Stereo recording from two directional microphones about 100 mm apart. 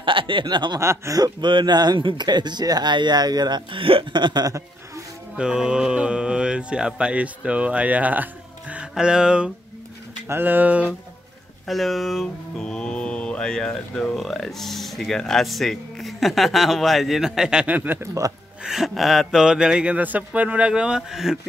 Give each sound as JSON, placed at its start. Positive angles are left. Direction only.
{"t": 0.0, "sound": "a sound", "side_deg": -55}
{"t": 0.7, "sound": "speech", "side_deg": -30}
{"t": 1.4, "sound": "speech", "side_deg": -50}
{"t": 5.3, "sound": "speech", "side_deg": -10}
{"t": 10.2, "sound": "speech", "side_deg": -20}
{"t": 11.6, "sound": "speech", "side_deg": 0}
{"t": 18.6, "sound": "speech", "side_deg": -5}